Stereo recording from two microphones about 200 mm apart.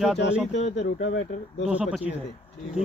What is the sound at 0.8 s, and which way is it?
Speech, 70° left (ahead or behind).